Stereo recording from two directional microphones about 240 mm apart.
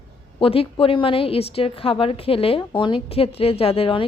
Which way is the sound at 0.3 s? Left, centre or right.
Left.